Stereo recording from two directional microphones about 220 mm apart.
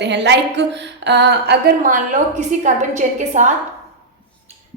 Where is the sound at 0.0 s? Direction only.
50° right (ahead or behind); by 3.5 s 35° right (ahead or behind).